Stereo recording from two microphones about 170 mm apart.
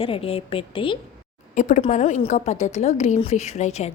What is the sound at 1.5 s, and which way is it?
A woman's voice, 50° left (ahead or behind).